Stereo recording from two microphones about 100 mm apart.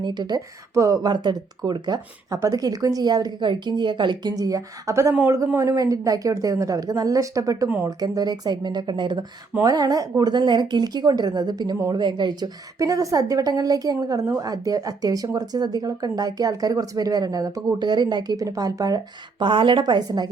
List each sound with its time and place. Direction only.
0.0 s a woman's voice: 45° right (ahead or behind)
2.3 s a woman's voice: 35° right (ahead or behind)
9.6 s a woman's voice: 40° right (ahead or behind)